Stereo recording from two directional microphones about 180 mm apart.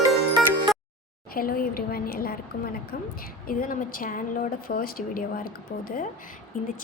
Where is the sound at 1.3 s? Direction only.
55° left (ahead or behind).